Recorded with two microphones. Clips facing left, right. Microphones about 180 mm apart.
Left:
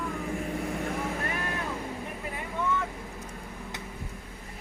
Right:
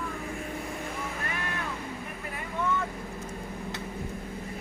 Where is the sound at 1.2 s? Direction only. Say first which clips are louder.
Left 2 dB; 35° left (ahead or behind).